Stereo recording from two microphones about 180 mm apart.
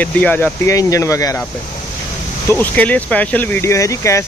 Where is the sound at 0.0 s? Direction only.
10° left (ahead or behind).